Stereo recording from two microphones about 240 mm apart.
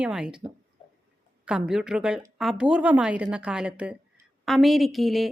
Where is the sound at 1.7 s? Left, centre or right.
Centre.